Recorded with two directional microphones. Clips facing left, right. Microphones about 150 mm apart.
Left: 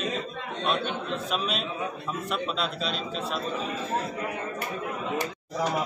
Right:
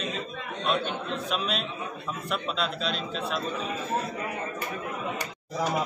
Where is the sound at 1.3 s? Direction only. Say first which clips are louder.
Left 1 dB; centre (ahead or behind).